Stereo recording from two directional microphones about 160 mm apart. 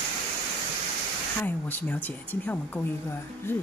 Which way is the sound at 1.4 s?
10° left (ahead or behind).